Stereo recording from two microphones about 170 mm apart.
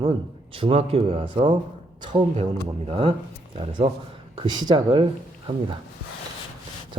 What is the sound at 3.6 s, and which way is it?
Speech, 30° right (ahead or behind).